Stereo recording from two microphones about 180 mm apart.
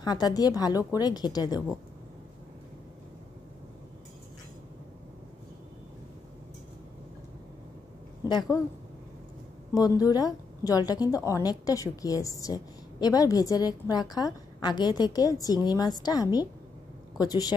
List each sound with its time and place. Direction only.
0.0 s a woman's voice: 20° left (ahead or behind)
8.2 s a woman's voice: 20° left (ahead or behind)
9.8 s a woman's voice: 20° left (ahead or behind)